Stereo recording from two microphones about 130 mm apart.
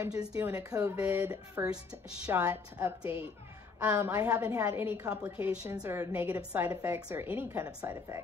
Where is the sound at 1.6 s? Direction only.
5° right (ahead or behind).